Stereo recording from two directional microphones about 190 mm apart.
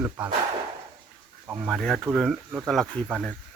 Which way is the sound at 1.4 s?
5° right (ahead or behind).